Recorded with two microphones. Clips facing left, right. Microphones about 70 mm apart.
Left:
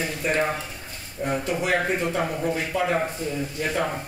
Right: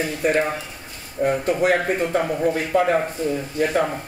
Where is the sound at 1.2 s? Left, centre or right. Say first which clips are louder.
Right 6 dB; right.